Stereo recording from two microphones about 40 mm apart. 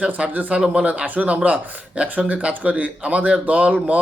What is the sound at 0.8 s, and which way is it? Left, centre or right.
Speech, right.